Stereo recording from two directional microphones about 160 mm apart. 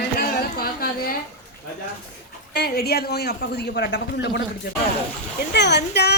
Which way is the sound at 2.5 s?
85° left.